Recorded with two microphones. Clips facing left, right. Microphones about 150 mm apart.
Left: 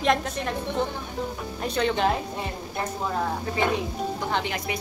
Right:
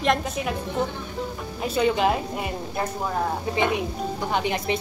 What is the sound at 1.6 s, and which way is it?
A woman's voice, 5° right (ahead or behind).